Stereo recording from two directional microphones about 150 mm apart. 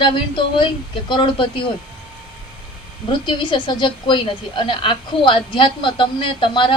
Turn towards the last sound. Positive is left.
turn(degrees=35)  # may be behind; listen again after turning